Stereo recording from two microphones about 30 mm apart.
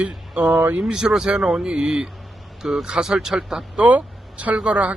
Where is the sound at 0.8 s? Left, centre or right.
Right.